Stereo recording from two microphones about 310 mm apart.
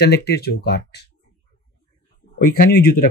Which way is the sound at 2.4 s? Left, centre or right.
Left.